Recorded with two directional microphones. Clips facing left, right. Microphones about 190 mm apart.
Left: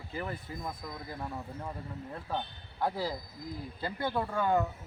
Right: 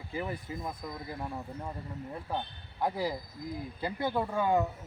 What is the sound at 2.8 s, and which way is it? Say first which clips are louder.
Speech: right 1 dB; 15° right (ahead or behind).